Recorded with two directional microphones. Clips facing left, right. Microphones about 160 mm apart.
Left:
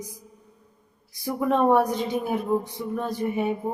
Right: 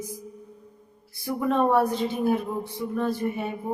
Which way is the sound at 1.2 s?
15° left (ahead or behind).